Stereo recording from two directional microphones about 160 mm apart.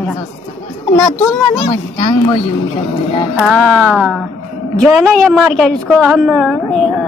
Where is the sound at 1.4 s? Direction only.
35° left (ahead or behind).